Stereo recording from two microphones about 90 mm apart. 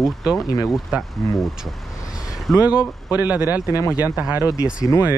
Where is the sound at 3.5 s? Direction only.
40° left (ahead or behind).